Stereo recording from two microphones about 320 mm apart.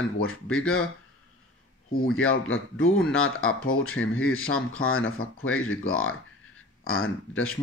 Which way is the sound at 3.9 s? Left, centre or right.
Left.